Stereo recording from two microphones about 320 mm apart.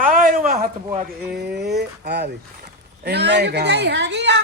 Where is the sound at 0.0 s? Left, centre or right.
Right.